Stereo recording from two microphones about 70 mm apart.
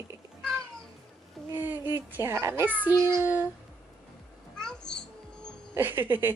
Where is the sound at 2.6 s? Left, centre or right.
Right.